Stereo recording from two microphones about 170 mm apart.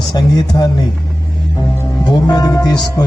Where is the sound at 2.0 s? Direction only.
25° left (ahead or behind).